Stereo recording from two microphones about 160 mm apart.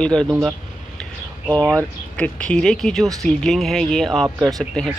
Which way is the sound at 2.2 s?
5° left (ahead or behind).